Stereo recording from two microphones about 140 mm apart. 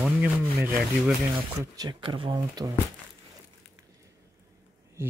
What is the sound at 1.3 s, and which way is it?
Speech, 35° right (ahead or behind).